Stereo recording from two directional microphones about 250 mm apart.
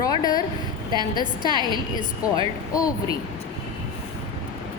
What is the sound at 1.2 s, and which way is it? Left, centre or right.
A woman's voice, centre.